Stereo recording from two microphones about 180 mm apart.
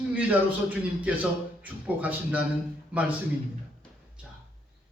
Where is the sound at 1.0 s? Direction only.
10° right (ahead or behind).